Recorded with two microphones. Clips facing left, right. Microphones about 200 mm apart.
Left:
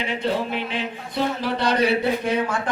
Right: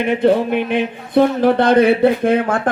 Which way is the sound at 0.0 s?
55° right (ahead or behind).